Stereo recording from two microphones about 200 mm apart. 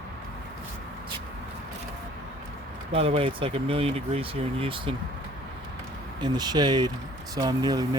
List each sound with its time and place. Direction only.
2.9 s speech: 25° right (ahead or behind)
6.1 s speech: 20° right (ahead or behind)